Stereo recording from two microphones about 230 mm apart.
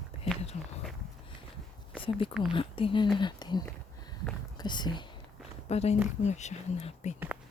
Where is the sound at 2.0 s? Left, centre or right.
Left.